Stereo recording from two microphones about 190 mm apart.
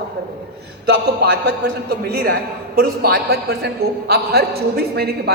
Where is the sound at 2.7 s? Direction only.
50° right (ahead or behind).